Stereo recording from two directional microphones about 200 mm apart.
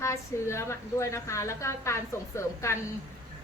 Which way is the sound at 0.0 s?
15° left (ahead or behind).